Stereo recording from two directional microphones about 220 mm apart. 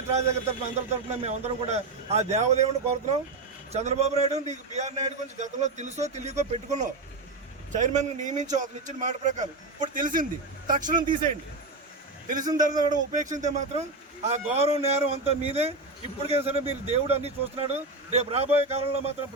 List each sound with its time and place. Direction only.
0.1 s a man's voice: 30° right (ahead or behind)
12.4 s a man's voice: 20° right (ahead or behind)
12.9 s a man's voice: 35° right (ahead or behind)